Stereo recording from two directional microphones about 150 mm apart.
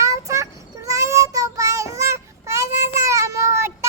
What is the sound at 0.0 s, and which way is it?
Child singing, 20° right (ahead or behind).